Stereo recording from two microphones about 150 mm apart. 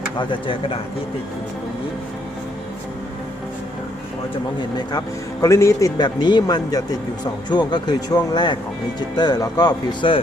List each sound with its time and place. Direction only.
0.2 s speech: 35° left (ahead or behind)
4.9 s speech: 25° left (ahead or behind)